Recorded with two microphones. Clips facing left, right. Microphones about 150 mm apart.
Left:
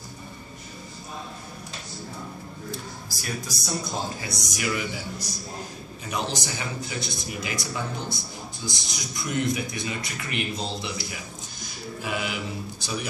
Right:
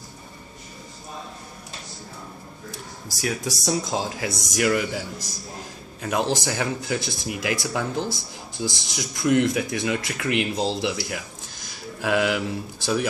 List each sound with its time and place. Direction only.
3.2 s speech: 85° right
6.0 s speech: 90° right
6.4 s speech: 75° right (ahead or behind)
9.2 s speech: 80° right